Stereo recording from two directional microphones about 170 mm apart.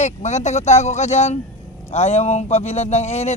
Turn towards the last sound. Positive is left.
turn(degrees=40)  # may be behind; listen again after turning